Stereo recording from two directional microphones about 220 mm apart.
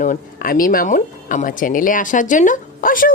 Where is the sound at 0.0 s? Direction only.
40° left (ahead or behind).